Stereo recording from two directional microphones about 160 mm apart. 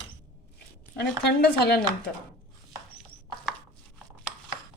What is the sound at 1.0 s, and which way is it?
Speech, 90° left.